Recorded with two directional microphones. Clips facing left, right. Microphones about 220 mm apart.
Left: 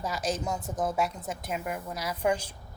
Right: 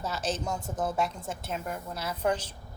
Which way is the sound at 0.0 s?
10° left (ahead or behind).